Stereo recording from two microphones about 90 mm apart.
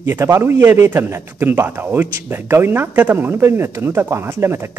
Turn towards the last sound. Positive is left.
turn(degrees=-25)  # may be behind; listen again after turning